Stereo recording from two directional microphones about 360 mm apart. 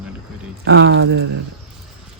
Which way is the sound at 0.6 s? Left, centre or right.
Right.